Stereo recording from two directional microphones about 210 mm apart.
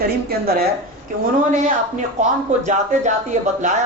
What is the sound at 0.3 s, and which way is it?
Speech, 45° right (ahead or behind).